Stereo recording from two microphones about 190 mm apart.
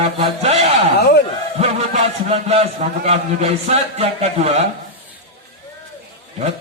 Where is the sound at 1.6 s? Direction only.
35° right (ahead or behind).